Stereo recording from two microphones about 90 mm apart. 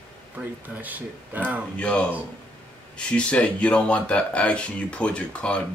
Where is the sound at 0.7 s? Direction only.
20° right (ahead or behind).